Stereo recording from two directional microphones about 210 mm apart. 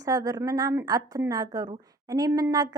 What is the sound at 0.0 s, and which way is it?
A woman's voice, 15° right (ahead or behind).